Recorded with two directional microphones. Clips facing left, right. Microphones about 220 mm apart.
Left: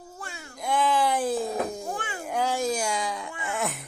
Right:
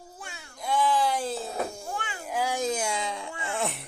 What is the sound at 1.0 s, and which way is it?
Cat, 15° left (ahead or behind).